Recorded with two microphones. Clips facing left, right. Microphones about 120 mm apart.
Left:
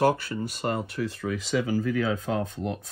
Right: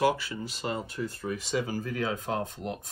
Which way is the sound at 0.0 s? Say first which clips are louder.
Left 3 dB; 50° left (ahead or behind).